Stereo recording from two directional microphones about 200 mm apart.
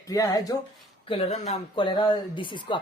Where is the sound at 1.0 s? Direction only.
30° left (ahead or behind).